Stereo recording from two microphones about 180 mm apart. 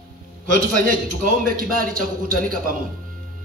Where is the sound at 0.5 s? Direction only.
50° right (ahead or behind).